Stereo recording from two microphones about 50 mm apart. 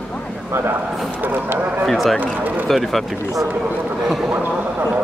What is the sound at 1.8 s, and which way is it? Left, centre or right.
A man's voice, centre.